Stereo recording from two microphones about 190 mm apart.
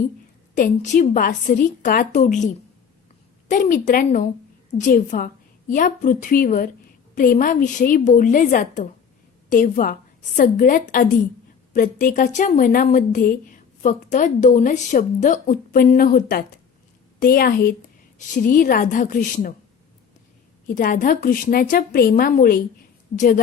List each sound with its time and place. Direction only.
0.5 s a woman's voice: 40° left (ahead or behind)
3.5 s a woman's voice: 40° left (ahead or behind)
20.7 s a woman's voice: 45° left (ahead or behind)